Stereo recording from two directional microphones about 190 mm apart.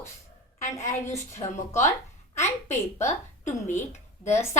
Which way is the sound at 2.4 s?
40° left (ahead or behind).